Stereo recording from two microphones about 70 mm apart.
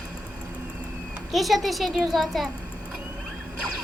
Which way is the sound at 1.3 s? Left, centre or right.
Centre.